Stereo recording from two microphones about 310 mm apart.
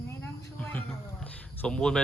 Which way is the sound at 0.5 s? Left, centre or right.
Centre.